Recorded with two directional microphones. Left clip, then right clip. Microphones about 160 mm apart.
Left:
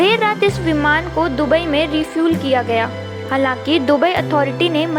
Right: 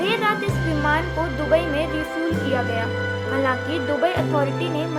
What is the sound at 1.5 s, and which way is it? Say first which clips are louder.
Speech: left 3 dB; 50° left (ahead or behind).